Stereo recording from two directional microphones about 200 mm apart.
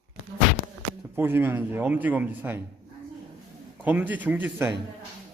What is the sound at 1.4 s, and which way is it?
A man's voice, 10° right (ahead or behind).